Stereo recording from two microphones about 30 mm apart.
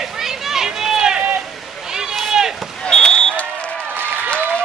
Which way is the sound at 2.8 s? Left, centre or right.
Left.